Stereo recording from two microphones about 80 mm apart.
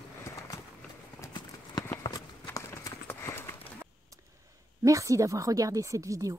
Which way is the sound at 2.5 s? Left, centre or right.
Left.